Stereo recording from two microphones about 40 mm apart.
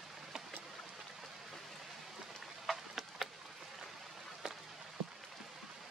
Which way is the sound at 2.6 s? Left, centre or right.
Centre.